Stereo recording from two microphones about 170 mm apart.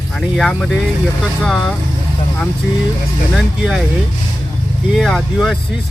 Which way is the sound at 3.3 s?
5° right (ahead or behind).